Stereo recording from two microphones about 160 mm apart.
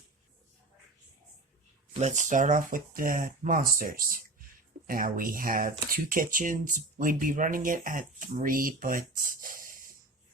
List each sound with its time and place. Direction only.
1.9 s speech: 45° right (ahead or behind); by 9.8 s 60° right (ahead or behind)